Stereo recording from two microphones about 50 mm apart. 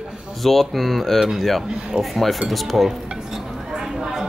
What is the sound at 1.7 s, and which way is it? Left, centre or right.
Speech, right.